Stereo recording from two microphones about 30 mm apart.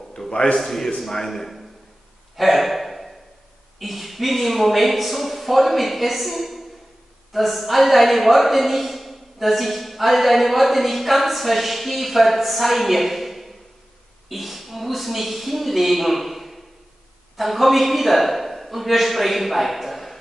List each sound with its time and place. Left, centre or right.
0.3 s a man's voice: left
0.6 s a man's voice: centre
2.3 s a sound: centre
3.8 s a woman's voice: centre